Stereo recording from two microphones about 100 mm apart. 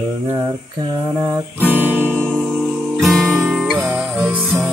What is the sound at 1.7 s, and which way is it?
Music, 20° right (ahead or behind).